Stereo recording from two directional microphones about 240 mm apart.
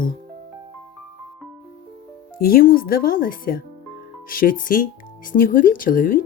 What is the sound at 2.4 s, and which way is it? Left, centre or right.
Speech, left.